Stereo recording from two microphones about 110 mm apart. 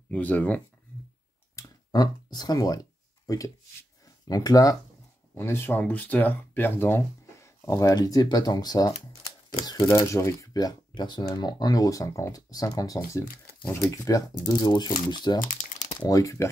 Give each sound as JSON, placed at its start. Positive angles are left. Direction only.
{"t": 0.1, "sound": "speech", "side_deg": 15}
{"t": 1.5, "sound": "a sound", "side_deg": 30}
{"t": 4.3, "sound": "speech", "side_deg": 35}
{"t": 5.3, "sound": "speech", "side_deg": 20}
{"t": 16.0, "sound": "speech", "side_deg": 30}